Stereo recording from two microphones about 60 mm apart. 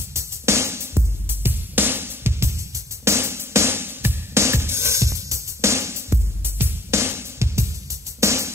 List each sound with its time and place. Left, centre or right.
0.1 s music: right